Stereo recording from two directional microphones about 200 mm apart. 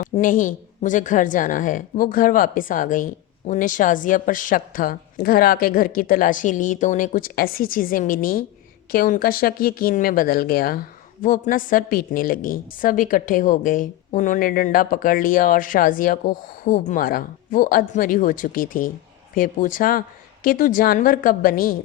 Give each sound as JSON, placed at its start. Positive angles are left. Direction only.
{"t": 0.0, "sound": "speech", "side_deg": 40}